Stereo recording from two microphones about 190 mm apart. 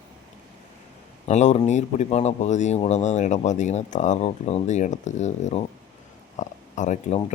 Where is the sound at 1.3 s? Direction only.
35° left (ahead or behind).